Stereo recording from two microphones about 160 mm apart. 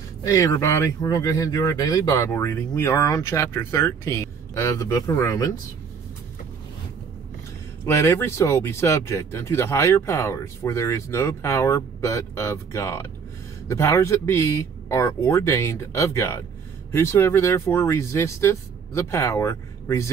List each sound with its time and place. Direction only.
0.2 s speech: 20° left (ahead or behind)
7.8 s speech: 15° left (ahead or behind)